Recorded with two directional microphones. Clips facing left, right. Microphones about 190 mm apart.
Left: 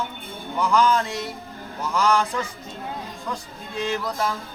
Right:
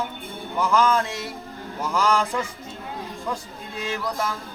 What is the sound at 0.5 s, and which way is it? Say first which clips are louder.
Speech: even; centre (ahead or behind).